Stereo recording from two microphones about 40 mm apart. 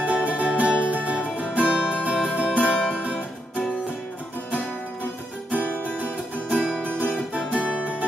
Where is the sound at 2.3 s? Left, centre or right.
Right.